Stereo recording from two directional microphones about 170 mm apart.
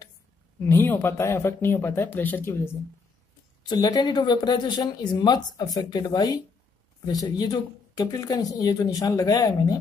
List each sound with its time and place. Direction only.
0.7 s speech: 15° left (ahead or behind)